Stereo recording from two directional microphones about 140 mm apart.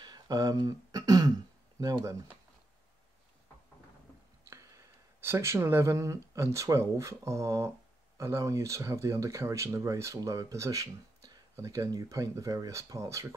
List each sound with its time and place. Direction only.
0.0 s throat clearing: 30° right (ahead or behind)
1.8 s speech: 25° right (ahead or behind)
4.5 s speech: 20° right (ahead or behind)